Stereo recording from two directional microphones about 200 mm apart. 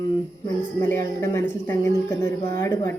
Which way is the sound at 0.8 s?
10° left (ahead or behind).